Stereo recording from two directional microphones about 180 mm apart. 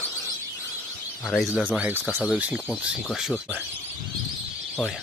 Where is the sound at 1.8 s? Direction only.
10° right (ahead or behind).